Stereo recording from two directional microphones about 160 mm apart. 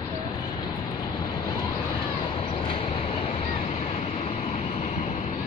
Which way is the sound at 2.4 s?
35° left (ahead or behind).